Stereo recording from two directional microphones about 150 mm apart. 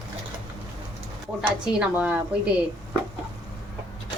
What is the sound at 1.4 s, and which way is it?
A woman's voice, 5° right (ahead or behind).